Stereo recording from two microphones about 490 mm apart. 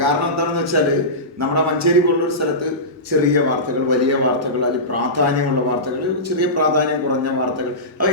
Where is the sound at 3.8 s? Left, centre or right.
Right.